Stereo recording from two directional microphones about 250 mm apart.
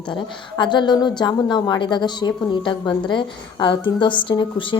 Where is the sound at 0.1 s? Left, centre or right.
Centre.